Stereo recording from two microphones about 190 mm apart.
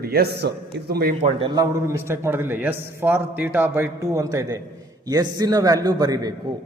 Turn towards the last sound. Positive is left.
turn(degrees=-20)  # may be behind; listen again after turning